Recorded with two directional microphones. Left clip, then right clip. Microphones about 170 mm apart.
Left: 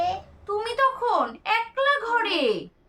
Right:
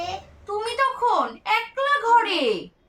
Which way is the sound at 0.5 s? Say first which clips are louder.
Even; 25° left (ahead or behind).